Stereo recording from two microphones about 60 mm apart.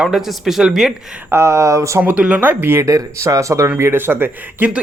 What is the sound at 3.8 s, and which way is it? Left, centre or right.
Speech, right.